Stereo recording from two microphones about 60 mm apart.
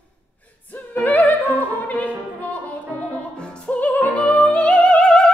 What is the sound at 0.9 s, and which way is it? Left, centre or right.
Opera, left.